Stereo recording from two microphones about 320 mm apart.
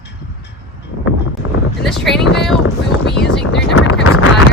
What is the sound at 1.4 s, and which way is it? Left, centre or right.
Boat, left.